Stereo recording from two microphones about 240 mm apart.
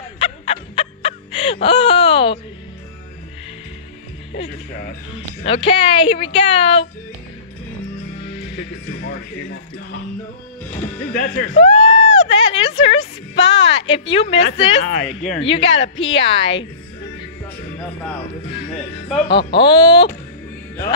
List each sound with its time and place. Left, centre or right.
0.2 s a sound: left
4.3 s a woman's voice: left
11.1 s speech: left
14.8 s speech: left
15.4 s a woman's voice: left
19.6 s speech: centre